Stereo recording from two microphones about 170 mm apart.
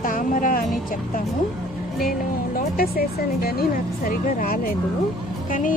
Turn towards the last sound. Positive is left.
turn(degrees=60)  # may be behind; listen again after turning